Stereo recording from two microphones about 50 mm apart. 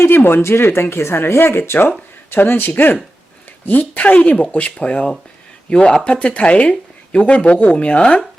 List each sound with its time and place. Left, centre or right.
0.0 s speech: left
0.4 s speech: left